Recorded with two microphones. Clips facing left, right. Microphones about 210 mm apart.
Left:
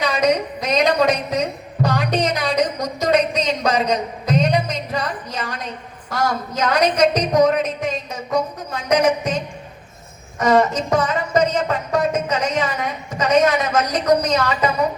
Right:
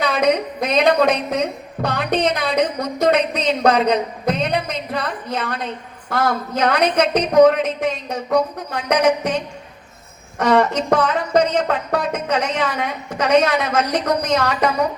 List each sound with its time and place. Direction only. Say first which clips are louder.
0.0 s a man's voice: right 1 dB; 55° right (ahead or behind)